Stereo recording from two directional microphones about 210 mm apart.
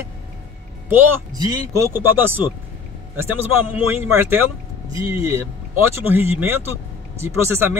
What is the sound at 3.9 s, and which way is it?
Speech, 10° right (ahead or behind).